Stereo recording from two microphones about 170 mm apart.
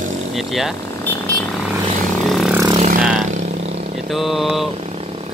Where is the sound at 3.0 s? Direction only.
5° right (ahead or behind).